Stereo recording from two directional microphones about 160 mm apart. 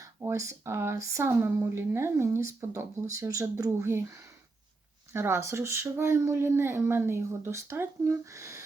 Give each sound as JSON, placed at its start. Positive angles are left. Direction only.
{"t": 0.0, "sound": "speech", "side_deg": -20}
{"t": 5.1, "sound": "speech", "side_deg": -15}